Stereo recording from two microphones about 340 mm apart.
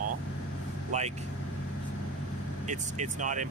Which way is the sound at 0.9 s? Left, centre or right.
Centre.